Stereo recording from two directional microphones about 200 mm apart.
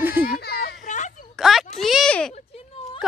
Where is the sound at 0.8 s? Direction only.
40° left (ahead or behind).